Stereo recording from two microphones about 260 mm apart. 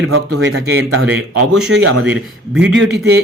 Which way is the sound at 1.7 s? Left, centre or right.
Right.